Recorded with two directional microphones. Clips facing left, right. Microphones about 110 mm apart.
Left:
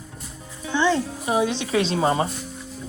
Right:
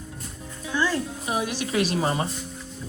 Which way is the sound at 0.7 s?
25° left (ahead or behind).